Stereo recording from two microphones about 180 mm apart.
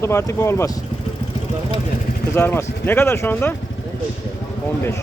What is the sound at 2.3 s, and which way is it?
Speech, 15° left (ahead or behind).